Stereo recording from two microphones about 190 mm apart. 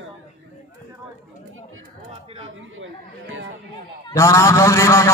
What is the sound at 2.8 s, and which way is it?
Speech, 90° right.